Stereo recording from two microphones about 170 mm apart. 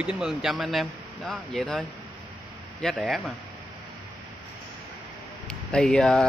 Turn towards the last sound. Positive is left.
turn(degrees=0)  # may be behind; listen again after turning